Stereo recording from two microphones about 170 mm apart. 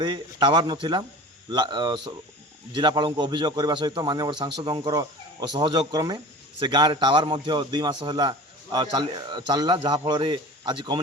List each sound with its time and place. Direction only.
0.0 s a man's voice: 25° right (ahead or behind)